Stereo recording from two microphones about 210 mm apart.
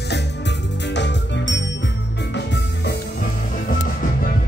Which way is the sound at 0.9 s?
55° left (ahead or behind).